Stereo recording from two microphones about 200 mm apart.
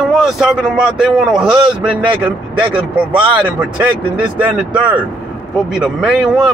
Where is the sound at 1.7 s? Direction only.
25° right (ahead or behind).